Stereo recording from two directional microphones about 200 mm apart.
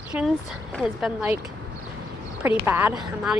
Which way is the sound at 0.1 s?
5° right (ahead or behind).